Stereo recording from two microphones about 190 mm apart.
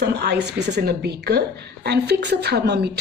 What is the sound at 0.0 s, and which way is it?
A woman's voice, 60° right (ahead or behind).